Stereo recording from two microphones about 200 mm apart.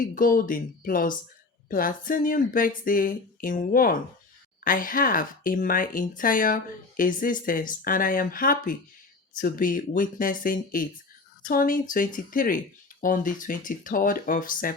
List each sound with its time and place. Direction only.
0.0 s speech: 45° left (ahead or behind)